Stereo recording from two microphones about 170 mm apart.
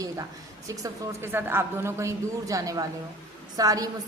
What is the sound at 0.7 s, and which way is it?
A man's voice, 15° right (ahead or behind).